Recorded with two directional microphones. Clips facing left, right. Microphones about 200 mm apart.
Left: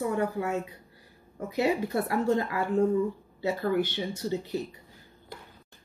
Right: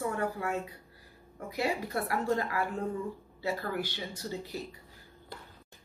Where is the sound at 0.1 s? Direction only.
20° left (ahead or behind).